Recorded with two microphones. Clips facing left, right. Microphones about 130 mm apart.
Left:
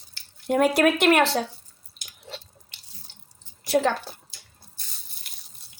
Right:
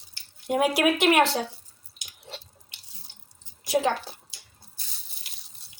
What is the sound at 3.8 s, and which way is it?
Speech, 50° left (ahead or behind).